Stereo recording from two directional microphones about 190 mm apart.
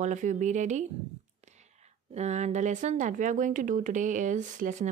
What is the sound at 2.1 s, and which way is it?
Speech, 35° right (ahead or behind).